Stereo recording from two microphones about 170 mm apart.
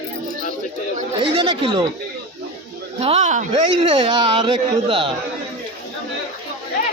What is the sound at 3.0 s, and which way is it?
Speech, 40° right (ahead or behind).